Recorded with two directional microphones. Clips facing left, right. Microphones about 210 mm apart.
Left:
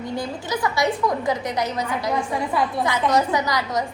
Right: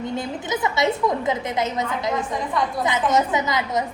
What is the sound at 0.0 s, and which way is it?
A woman's voice, 20° right (ahead or behind).